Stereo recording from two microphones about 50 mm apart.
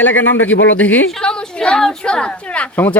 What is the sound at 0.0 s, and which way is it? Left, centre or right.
Speech, left.